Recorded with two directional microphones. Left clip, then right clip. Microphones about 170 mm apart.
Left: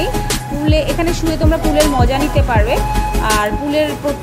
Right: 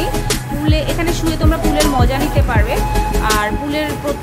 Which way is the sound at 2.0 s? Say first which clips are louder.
Left 2 dB; 15° left (ahead or behind).